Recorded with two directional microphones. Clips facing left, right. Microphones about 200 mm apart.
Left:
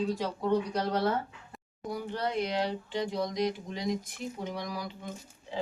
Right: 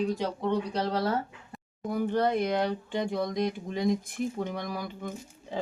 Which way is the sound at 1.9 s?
50° right (ahead or behind).